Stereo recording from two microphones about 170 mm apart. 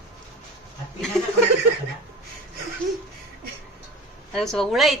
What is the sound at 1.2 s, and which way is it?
Speech, centre (ahead or behind).